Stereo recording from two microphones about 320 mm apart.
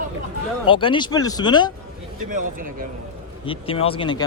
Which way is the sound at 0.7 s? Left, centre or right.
Centre.